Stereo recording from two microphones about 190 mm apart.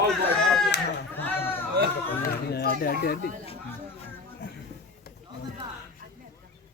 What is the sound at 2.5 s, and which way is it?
Speech, 55° left (ahead or behind).